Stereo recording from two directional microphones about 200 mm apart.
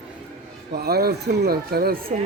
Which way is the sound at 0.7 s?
50° right (ahead or behind).